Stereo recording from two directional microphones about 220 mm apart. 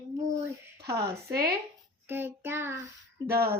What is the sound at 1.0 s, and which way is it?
Speech, 45° right (ahead or behind).